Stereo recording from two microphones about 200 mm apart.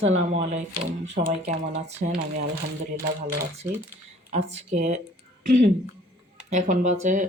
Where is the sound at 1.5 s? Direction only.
35° right (ahead or behind).